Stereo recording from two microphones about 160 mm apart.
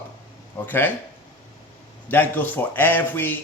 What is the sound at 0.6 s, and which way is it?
Speech, 15° left (ahead or behind).